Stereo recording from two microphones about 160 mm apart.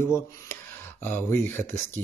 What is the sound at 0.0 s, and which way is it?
Speech, 15° left (ahead or behind).